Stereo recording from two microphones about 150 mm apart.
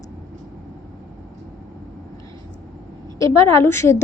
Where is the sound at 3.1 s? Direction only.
20° left (ahead or behind).